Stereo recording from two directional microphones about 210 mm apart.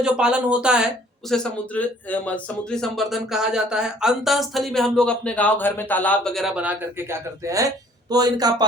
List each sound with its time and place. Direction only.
0.0 s a man's voice: 5° right (ahead or behind)